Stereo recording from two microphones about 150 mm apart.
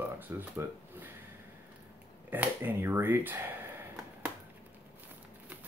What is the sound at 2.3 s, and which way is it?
Speech, 10° right (ahead or behind).